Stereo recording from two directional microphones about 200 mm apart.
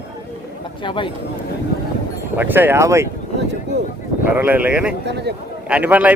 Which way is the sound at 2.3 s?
10° right (ahead or behind).